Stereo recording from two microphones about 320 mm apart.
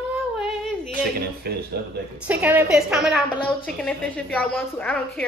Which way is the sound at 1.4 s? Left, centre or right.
Right.